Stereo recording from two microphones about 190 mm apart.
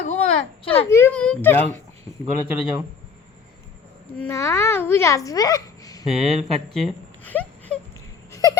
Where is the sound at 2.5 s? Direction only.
10° right (ahead or behind).